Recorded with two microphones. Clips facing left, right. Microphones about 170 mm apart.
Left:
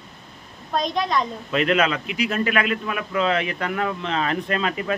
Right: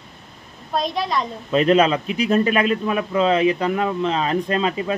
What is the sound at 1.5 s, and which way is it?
A man's voice, 30° right (ahead or behind).